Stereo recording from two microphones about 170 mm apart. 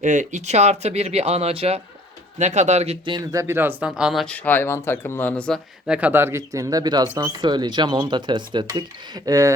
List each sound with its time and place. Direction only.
0.0 s speech: 45° right (ahead or behind)
3.2 s speech: 15° right (ahead or behind)